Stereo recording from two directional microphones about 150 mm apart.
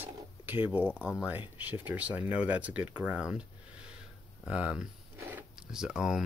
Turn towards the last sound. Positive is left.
turn(degrees=-5)  # may be behind; listen again after turning